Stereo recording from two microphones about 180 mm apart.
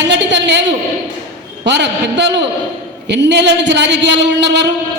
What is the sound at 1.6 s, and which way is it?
A man's voice, 75° right (ahead or behind).